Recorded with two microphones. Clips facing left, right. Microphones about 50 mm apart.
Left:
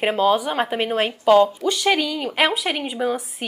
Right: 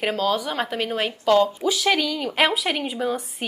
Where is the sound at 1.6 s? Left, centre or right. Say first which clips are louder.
Left 1 dB; centre.